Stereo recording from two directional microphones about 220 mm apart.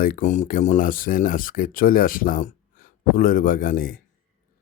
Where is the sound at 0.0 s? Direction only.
35° left (ahead or behind).